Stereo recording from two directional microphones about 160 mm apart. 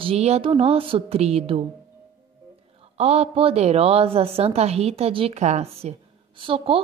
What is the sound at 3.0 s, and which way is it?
Speech, 40° right (ahead or behind).